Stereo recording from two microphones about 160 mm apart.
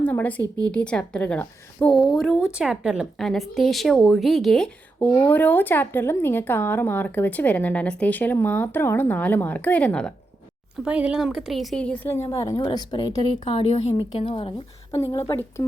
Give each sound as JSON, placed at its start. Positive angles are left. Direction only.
{"t": 0.0, "sound": "a sound", "side_deg": 10}
{"t": 0.7, "sound": "a woman's voice", "side_deg": 5}
{"t": 10.8, "sound": "a woman's voice", "side_deg": -5}
{"t": 13.4, "sound": "a woman's voice", "side_deg": 35}
{"t": 14.9, "sound": "a woman's voice", "side_deg": 20}